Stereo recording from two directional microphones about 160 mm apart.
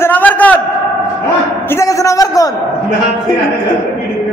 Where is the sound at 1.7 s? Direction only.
20° left (ahead or behind).